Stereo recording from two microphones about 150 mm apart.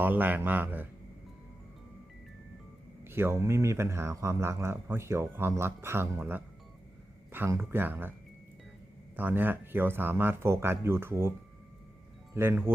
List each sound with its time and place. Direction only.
0.0 s speech: 10° right (ahead or behind)
3.0 s speech: 15° right (ahead or behind)
9.1 s speech: 10° right (ahead or behind)